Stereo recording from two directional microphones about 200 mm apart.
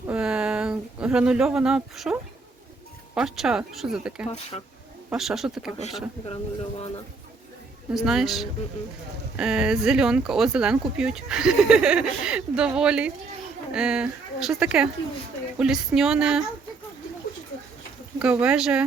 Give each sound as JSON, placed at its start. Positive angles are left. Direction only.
{"t": 0.1, "sound": "a sound", "side_deg": -5}
{"t": 3.2, "sound": "speech", "side_deg": 0}
{"t": 4.5, "sound": "speech", "side_deg": 25}
{"t": 5.0, "sound": "speech", "side_deg": 0}
{"t": 6.2, "sound": "speech", "side_deg": 30}
{"t": 7.9, "sound": "speech", "side_deg": 0}
{"t": 18.2, "sound": "speech", "side_deg": -5}